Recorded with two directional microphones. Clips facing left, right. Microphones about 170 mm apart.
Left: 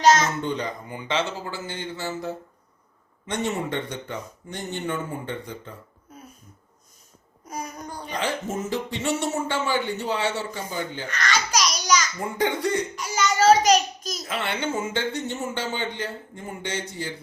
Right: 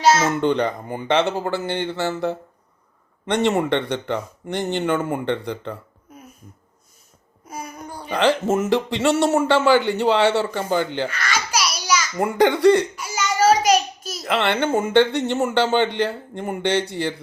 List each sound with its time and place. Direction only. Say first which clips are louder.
0.0 s babbling: right 1 dB; 10° right (ahead or behind)
0.3 s speech: right 8 dB; 65° right (ahead or behind); by 5.7 s 80° right
7.4 s a sound: even; 10° right (ahead or behind)
8.1 s a man's voice: right 10 dB; 75° right (ahead or behind)
11.1 s babbling: even; 10° right (ahead or behind)
12.1 s speech: right 8 dB; 80° right
13.0 s a sound: right 2 dB; 10° right (ahead or behind)
14.3 s a man's voice: right 8 dB; 75° right (ahead or behind)